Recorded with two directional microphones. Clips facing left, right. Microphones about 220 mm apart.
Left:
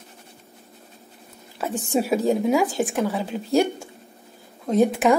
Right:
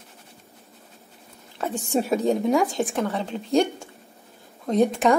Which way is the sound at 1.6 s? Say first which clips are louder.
Left 1 dB; 5° left (ahead or behind).